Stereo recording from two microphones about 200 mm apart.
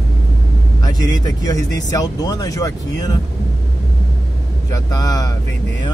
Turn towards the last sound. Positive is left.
turn(degrees=20)  # may be behind; listen again after turning